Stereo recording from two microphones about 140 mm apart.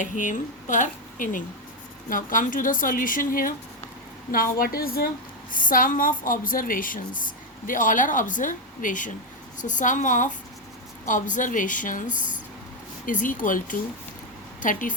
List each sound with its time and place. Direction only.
0.0 s speech: 65° left (ahead or behind)
4.3 s a woman's voice: 90° left
5.5 s a woman's voice: 80° left